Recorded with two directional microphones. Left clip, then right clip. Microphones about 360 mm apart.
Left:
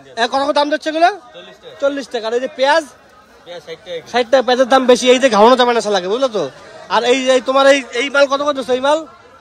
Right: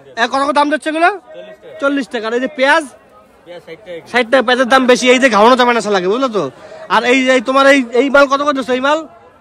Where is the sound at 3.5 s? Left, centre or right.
Centre.